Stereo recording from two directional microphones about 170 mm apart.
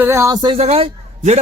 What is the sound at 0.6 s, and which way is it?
Speech, 35° right (ahead or behind).